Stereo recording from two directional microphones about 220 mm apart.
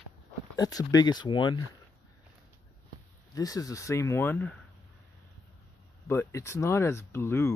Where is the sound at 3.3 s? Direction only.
15° left (ahead or behind).